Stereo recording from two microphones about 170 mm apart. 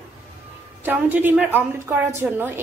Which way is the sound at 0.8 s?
10° right (ahead or behind).